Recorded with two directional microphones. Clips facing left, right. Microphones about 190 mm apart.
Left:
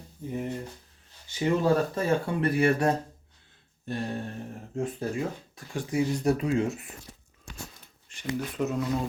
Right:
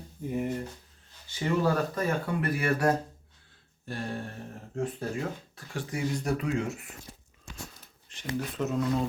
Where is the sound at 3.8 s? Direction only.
20° left (ahead or behind).